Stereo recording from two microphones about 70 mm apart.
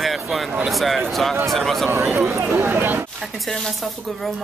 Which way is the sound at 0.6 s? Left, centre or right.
Centre.